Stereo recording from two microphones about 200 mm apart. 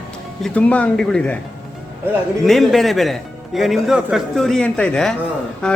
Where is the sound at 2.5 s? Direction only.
Centre (ahead or behind).